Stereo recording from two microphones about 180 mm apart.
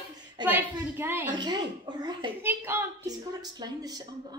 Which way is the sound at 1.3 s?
25° right (ahead or behind).